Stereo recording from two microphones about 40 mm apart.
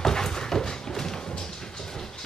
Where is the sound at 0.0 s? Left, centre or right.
Centre.